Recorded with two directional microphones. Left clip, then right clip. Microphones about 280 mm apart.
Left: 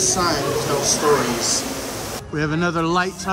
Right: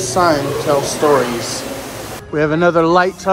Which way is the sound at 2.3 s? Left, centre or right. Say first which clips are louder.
Right 9 dB; centre.